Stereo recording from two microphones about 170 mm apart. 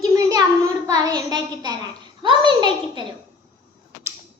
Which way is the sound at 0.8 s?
20° right (ahead or behind).